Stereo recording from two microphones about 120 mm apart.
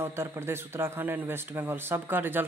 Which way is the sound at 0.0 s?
20° right (ahead or behind).